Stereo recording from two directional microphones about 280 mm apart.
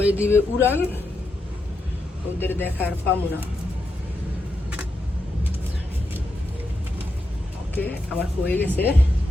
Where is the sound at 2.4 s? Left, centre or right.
Centre.